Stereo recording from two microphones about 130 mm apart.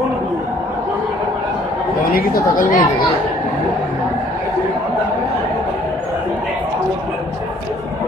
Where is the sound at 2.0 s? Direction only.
90° left.